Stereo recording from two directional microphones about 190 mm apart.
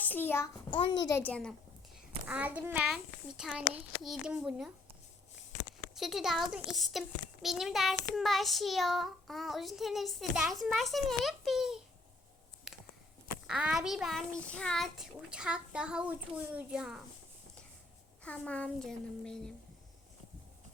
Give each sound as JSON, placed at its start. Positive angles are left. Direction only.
{"t": 0.0, "sound": "a child's voice", "side_deg": 10}
{"t": 0.7, "sound": "a child's voice", "side_deg": 25}
{"t": 1.2, "sound": "child singing", "side_deg": 5}
{"t": 2.2, "sound": "child singing", "side_deg": -10}
{"t": 5.9, "sound": "child singing", "side_deg": 0}
{"t": 12.7, "sound": "a sound", "side_deg": 0}
{"t": 13.5, "sound": "child singing", "side_deg": -5}
{"t": 18.2, "sound": "speech", "side_deg": 5}